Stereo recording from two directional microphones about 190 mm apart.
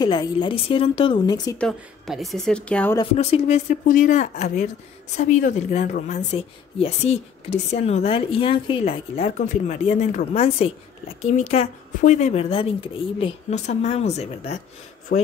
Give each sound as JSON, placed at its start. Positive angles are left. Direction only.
{"t": 0.0, "sound": "a woman's voice", "side_deg": 20}
{"t": 1.6, "sound": "a woman's voice", "side_deg": 0}
{"t": 3.2, "sound": "a woman's voice", "side_deg": 35}
{"t": 15.1, "sound": "speech", "side_deg": 50}